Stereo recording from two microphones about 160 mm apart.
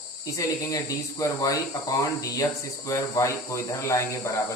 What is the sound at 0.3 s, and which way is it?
Speech, 20° left (ahead or behind).